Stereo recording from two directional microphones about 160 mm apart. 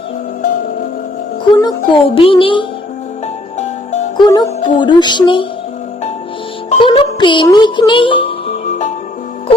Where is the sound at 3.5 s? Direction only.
45° left (ahead or behind).